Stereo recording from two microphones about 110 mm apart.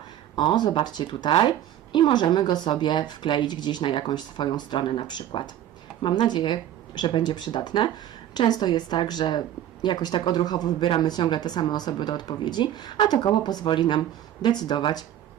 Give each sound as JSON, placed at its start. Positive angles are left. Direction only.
{"t": 0.3, "sound": "speech", "side_deg": 40}